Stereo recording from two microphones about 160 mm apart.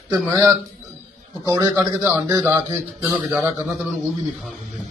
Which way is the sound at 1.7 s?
5° left (ahead or behind).